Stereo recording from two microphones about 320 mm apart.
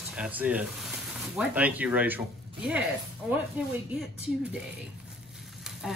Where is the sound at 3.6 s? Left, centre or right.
Centre.